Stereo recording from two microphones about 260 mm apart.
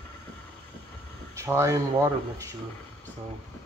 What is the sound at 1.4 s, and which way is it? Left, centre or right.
Speech, centre.